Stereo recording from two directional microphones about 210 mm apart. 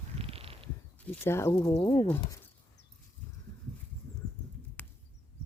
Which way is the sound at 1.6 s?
20° left (ahead or behind).